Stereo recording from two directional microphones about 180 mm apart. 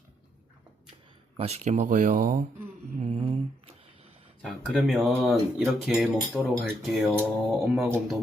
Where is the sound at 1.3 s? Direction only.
35° right (ahead or behind).